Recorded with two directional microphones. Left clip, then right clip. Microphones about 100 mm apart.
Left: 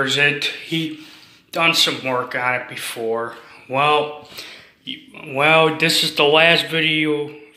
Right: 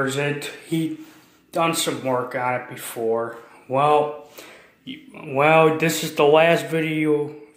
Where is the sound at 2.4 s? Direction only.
30° right (ahead or behind).